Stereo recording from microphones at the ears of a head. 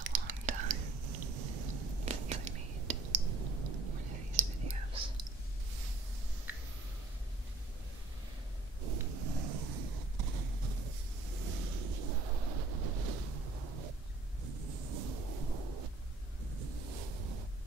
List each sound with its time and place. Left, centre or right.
0.0 s whispering: right
8.8 s a sound: right
16.4 s ocean: right